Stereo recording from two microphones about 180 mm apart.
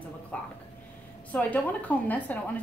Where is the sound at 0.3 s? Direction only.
5° left (ahead or behind).